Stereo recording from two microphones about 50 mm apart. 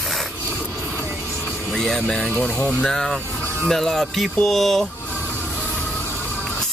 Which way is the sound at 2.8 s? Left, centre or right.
Centre.